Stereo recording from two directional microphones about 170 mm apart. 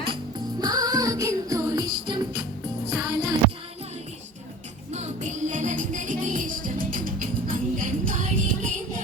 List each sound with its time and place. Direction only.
0.6 s music: 20° right (ahead or behind)
4.9 s music: 40° right (ahead or behind)